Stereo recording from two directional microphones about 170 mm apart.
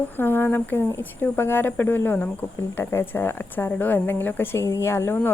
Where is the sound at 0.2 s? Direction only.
10° left (ahead or behind).